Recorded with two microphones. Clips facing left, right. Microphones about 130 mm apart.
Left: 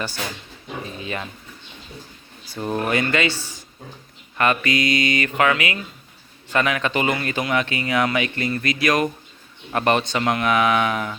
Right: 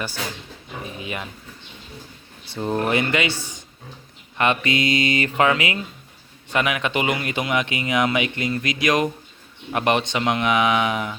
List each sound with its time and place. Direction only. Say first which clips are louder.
0.9 s speech: even; 15° right (ahead or behind)
2.5 s speech: right 1 dB; 20° right (ahead or behind)
6.5 s speech: left 1 dB; 15° right (ahead or behind)